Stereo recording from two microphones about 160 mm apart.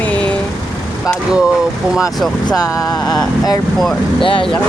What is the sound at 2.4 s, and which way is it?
Vehicle, 25° left (ahead or behind).